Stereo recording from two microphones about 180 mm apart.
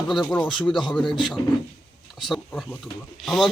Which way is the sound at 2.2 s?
Centre (ahead or behind).